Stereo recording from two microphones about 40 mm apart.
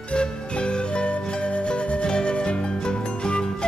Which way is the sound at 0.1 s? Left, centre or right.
Left.